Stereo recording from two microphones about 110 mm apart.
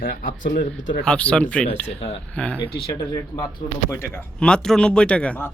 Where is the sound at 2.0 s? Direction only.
65° left (ahead or behind).